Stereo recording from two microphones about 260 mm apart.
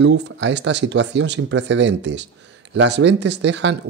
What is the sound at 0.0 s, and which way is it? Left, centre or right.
Speech, right.